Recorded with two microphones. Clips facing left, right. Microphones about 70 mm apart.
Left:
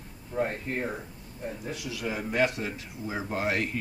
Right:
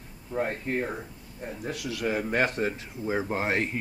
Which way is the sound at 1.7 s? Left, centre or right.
Right.